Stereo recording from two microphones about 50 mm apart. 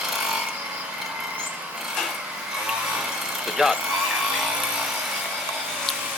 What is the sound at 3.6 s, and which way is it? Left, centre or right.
Speech, centre.